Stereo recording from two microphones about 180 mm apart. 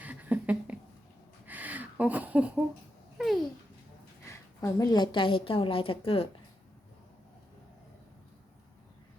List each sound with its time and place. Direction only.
0.0 s a sound: 10° right (ahead or behind)
3.2 s babbling: centre (ahead or behind)
4.3 s a woman's voice: 15° left (ahead or behind)